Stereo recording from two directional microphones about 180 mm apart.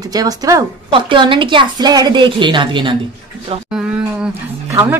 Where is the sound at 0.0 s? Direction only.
20° right (ahead or behind).